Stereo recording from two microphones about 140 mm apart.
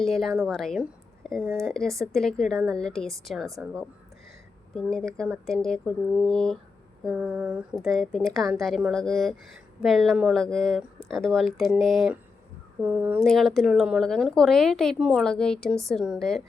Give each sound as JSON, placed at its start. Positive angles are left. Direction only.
{"t": 0.0, "sound": "speech", "side_deg": 0}
{"t": 4.7, "sound": "speech", "side_deg": 5}
{"t": 7.0, "sound": "speech", "side_deg": -5}
{"t": 13.2, "sound": "speech", "side_deg": 0}